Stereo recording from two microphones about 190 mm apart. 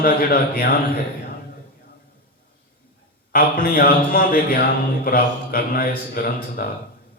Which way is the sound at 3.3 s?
45° left (ahead or behind).